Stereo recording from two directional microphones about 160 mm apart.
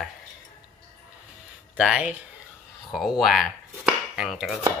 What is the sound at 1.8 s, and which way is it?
Speech, 5° right (ahead or behind).